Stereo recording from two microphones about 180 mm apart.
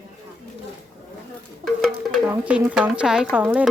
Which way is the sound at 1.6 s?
Centre (ahead or behind).